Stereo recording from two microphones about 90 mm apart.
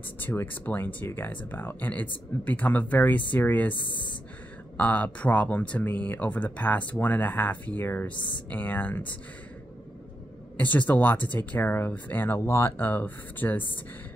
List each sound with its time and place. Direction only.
0.2 s speech: 20° left (ahead or behind)
3.7 s speech: 65° left (ahead or behind)
4.7 s speech: 15° left (ahead or behind)
10.6 s speech: 20° left (ahead or behind)